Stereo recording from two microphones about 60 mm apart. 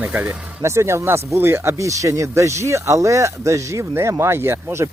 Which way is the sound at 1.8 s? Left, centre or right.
Right.